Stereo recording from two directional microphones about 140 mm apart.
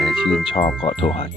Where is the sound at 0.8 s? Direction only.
40° left (ahead or behind).